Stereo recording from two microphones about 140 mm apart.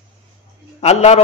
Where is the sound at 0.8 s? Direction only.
50° left (ahead or behind).